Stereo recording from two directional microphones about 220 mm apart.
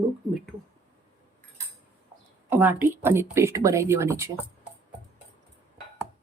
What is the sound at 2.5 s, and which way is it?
Speech, 10° right (ahead or behind).